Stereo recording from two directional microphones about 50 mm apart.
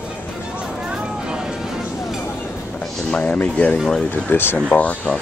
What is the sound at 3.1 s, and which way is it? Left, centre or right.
Speech, left.